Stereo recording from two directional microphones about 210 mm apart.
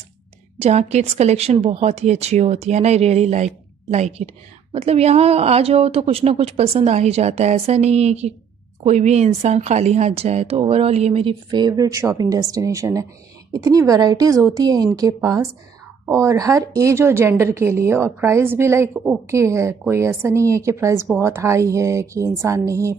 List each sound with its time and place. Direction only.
0.6 s a woman's voice: 30° right (ahead or behind); by 22.9 s 15° right (ahead or behind)